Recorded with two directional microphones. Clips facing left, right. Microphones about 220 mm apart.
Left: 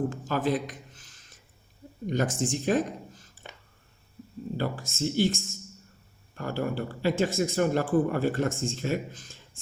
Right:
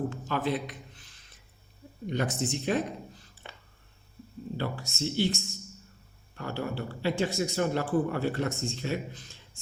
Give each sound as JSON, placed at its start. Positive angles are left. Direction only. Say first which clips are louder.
{"t": 0.1, "sound": "a sound", "louder": "left 3 dB", "side_deg": 45}
{"t": 2.0, "sound": "speech", "louder": "left 3 dB", "side_deg": 45}
{"t": 4.5, "sound": "speech", "louder": "left 3 dB", "side_deg": 45}